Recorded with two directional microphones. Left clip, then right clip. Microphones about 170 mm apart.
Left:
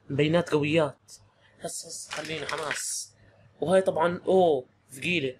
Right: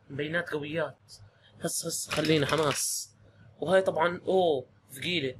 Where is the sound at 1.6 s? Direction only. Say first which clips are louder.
Right 4 dB; 15° right (ahead or behind).